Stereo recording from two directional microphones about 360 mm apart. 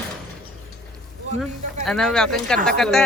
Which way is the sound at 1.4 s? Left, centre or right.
Centre.